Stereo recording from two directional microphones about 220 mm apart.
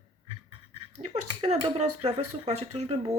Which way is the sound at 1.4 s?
30° right (ahead or behind).